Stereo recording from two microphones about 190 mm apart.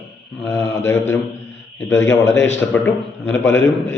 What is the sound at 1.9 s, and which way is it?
Speech, 70° left (ahead or behind).